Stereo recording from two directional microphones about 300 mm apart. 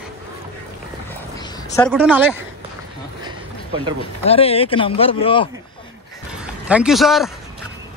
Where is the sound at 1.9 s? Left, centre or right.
Centre.